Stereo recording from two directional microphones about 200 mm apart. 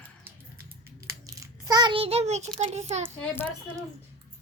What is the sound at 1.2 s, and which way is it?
Crunch, 15° right (ahead or behind).